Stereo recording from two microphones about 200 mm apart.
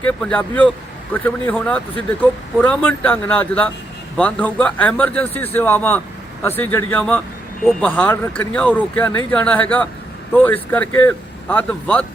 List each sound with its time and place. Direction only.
0.0 s speech: 5° left (ahead or behind)